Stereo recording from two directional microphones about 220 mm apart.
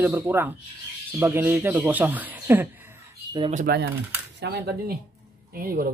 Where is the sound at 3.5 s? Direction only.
40° right (ahead or behind).